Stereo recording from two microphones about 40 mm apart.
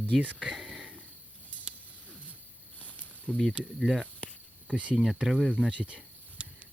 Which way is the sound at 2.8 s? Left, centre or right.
Left.